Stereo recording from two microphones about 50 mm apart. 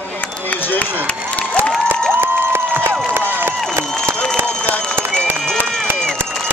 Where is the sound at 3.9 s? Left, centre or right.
Centre.